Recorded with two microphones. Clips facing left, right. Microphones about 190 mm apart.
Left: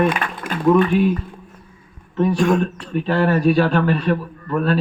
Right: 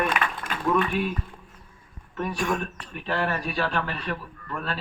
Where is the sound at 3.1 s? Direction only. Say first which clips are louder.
Left 11 dB; 40° left (ahead or behind).